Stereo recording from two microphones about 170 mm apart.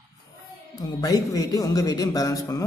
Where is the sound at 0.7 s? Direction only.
20° left (ahead or behind).